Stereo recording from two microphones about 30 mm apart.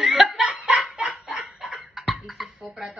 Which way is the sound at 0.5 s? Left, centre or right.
Right.